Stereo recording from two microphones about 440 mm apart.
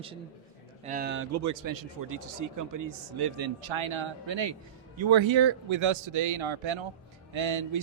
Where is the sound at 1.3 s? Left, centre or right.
Right.